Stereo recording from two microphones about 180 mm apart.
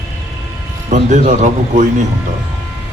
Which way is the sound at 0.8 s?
40° right (ahead or behind).